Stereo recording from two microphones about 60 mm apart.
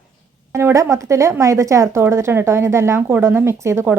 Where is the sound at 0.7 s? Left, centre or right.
Right.